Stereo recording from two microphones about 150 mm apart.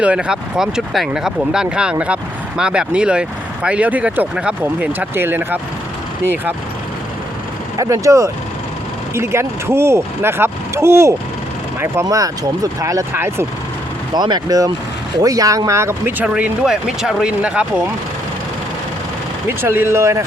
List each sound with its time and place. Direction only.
0.0 s speech: 10° right (ahead or behind)
7.8 s speech: 20° right (ahead or behind)
14.1 s speech: 30° right (ahead or behind); by 17.8 s 5° right (ahead or behind)
19.5 s speech: 15° right (ahead or behind)